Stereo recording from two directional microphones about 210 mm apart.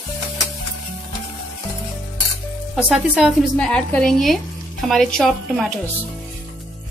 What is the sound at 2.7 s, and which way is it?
A woman's voice, centre (ahead or behind).